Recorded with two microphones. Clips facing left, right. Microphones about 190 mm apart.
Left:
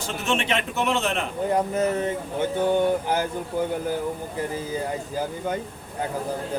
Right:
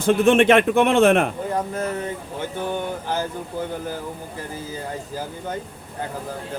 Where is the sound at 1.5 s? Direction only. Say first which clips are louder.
Left 4 dB; 20° left (ahead or behind).